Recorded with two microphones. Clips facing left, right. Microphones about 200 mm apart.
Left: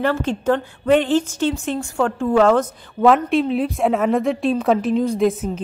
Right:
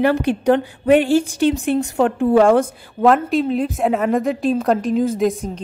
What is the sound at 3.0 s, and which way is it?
A woman's voice, centre (ahead or behind).